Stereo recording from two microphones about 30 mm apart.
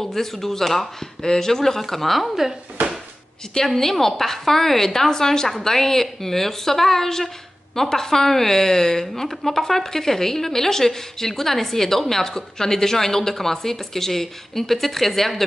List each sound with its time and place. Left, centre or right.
0.0 s a woman's voice: centre
3.6 s a woman's voice: centre